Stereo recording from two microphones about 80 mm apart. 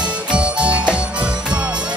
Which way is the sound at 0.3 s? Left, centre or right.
Centre.